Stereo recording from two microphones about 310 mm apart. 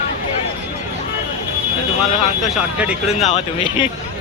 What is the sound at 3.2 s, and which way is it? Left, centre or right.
Speech, centre.